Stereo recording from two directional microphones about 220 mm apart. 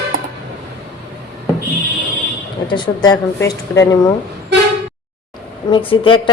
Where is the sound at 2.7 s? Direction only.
20° left (ahead or behind).